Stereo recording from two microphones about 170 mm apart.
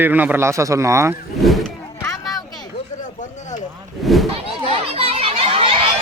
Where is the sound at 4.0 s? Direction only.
Centre (ahead or behind).